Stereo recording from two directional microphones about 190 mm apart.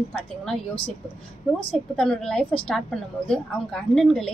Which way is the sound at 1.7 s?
5° left (ahead or behind).